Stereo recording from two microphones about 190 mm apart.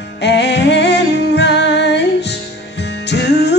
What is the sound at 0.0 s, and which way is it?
Music, 65° left (ahead or behind).